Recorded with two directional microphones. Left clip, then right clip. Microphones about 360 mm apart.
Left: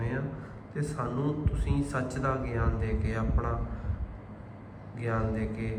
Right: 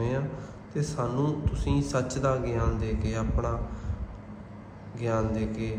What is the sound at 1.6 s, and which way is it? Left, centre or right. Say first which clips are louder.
A man's voice: right 5 dB; centre.